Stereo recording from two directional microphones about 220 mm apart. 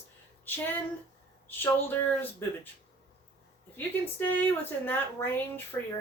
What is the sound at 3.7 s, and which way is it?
Speech, 10° left (ahead or behind).